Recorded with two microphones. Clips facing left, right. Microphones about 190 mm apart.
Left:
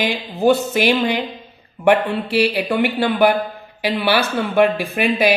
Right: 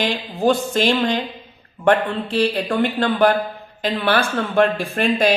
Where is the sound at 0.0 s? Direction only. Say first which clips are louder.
Left 2 dB; 10° left (ahead or behind).